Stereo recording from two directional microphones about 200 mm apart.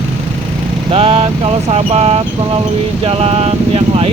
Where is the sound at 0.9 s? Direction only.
30° right (ahead or behind).